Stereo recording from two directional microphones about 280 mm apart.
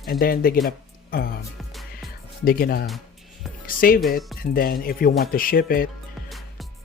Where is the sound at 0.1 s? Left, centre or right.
Left.